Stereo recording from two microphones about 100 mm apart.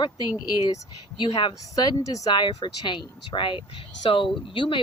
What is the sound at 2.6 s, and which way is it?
Speech, 50° left (ahead or behind).